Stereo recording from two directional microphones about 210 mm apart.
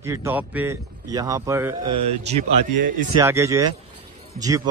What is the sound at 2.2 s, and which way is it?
Speech, 30° right (ahead or behind).